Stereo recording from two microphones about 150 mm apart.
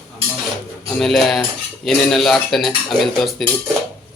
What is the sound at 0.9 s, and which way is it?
Cutlery, centre (ahead or behind).